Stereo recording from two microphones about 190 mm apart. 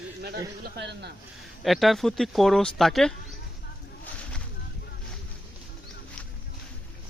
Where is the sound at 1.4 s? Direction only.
Centre (ahead or behind).